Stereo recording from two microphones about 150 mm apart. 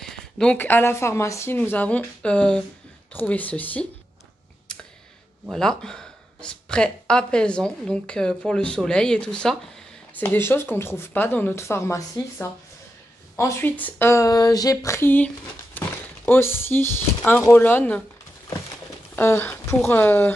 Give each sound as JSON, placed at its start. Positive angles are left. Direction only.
{"t": 0.0, "sound": "speech", "side_deg": 5}
{"t": 4.7, "sound": "computer keyboard", "side_deg": 5}
{"t": 5.5, "sound": "speech", "side_deg": 5}
{"t": 19.1, "sound": "speech", "side_deg": 15}